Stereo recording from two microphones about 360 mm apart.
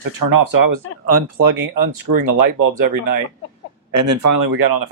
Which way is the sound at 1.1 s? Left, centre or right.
Right.